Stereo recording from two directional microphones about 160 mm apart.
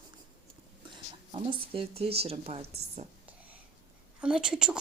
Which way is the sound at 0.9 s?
30° right (ahead or behind).